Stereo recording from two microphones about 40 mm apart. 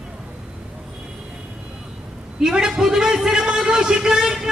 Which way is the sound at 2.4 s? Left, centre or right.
Centre.